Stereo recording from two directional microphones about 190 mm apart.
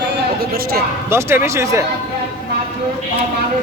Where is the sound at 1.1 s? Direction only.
15° right (ahead or behind).